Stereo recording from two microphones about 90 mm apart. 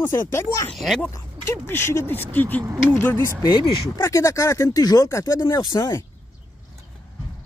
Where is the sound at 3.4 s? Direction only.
35° left (ahead or behind).